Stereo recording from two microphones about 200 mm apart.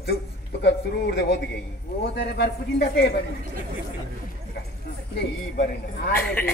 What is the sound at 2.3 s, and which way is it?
Speech, 55° left (ahead or behind).